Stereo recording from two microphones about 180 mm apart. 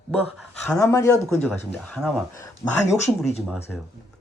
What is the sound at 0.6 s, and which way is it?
Speech, 15° left (ahead or behind).